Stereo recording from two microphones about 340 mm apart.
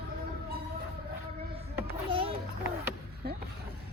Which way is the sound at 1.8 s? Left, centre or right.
Centre.